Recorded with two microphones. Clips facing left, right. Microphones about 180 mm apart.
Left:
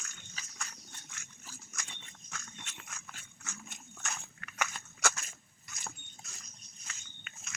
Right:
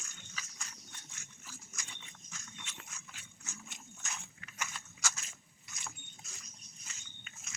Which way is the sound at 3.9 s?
60° left (ahead or behind).